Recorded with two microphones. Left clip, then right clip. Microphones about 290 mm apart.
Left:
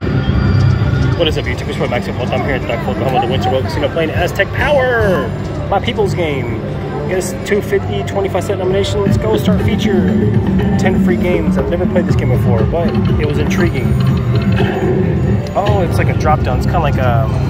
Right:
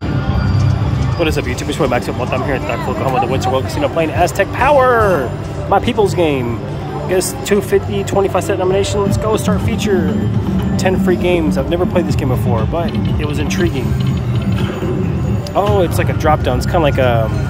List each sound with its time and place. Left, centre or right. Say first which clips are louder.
4.0 s speech: right 2 dB; centre
8.5 s speech: right 1 dB; centre
15.5 s speech: right 2 dB; right